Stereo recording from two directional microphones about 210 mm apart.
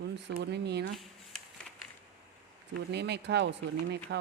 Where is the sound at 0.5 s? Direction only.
55° right (ahead or behind).